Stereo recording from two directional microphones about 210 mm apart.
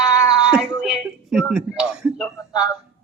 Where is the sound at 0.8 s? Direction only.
Centre (ahead or behind).